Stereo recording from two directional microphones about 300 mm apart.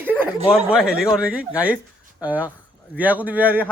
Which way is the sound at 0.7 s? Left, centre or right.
Centre.